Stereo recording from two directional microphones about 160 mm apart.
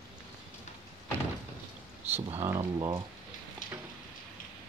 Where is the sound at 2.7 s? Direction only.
25° right (ahead or behind).